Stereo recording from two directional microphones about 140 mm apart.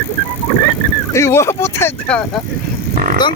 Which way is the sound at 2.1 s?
10° left (ahead or behind).